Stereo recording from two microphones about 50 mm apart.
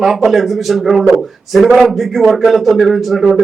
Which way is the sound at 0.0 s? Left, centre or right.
Centre.